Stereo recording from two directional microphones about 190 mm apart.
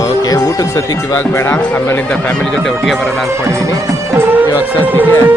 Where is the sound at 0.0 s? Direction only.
20° left (ahead or behind).